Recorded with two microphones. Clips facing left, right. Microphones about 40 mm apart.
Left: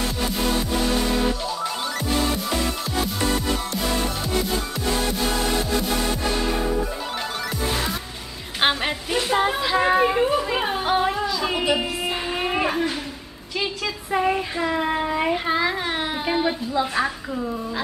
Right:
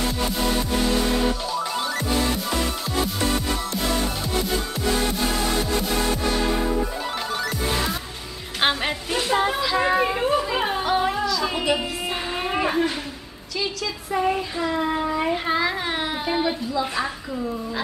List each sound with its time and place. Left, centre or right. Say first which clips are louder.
8.5 s music: left 1 dB; centre
9.6 s children playing: left 2 dB; centre
10.6 s music: even; centre
11.2 s a sound: even; centre
14.1 s child singing: left 1 dB; centre
15.3 s a sound: left 1 dB; centre
16.9 s a woman's voice: left 3 dB; centre